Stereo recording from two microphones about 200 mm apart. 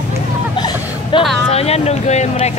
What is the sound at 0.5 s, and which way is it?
Hubbub, 20° left (ahead or behind).